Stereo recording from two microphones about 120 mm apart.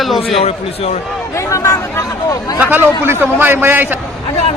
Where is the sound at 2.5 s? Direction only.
10° right (ahead or behind).